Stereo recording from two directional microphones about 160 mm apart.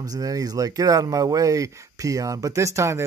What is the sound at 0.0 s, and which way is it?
Speech, 20° right (ahead or behind).